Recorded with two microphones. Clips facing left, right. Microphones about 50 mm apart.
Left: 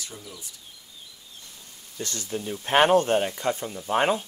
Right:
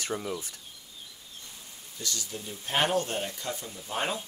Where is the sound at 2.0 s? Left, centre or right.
Left.